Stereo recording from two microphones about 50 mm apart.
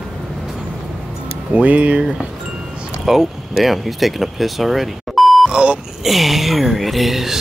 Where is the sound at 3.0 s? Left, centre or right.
Centre.